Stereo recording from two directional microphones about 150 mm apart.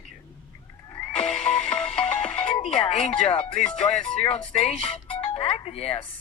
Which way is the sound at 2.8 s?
40° left (ahead or behind).